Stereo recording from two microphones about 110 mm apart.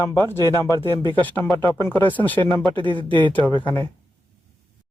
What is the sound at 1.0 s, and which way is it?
Speech, 50° right (ahead or behind).